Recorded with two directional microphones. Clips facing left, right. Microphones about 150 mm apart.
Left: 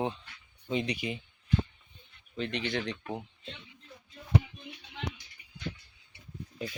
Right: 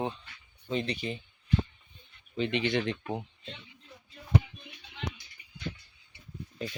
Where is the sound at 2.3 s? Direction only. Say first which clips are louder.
Right 4 dB; centre (ahead or behind).